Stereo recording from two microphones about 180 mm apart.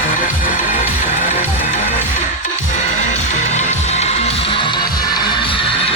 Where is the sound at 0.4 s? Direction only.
50° left (ahead or behind).